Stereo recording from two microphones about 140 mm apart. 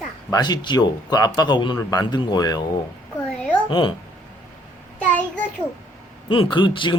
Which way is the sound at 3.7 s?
35° left (ahead or behind).